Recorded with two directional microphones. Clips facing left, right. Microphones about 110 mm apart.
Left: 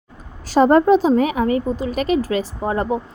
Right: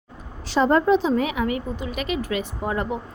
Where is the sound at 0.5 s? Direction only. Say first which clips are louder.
Left 5 dB; 40° left (ahead or behind).